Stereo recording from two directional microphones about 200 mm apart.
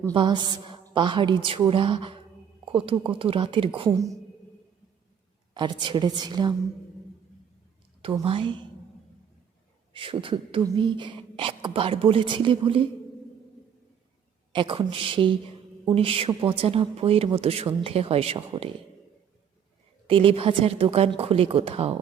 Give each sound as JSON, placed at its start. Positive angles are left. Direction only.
{"t": 0.1, "sound": "speech", "side_deg": -25}
{"t": 5.5, "sound": "speech", "side_deg": -20}
{"t": 8.2, "sound": "speech", "side_deg": -25}
{"t": 9.9, "sound": "speech", "side_deg": -25}
{"t": 14.5, "sound": "speech", "side_deg": -25}
{"t": 20.1, "sound": "speech", "side_deg": -25}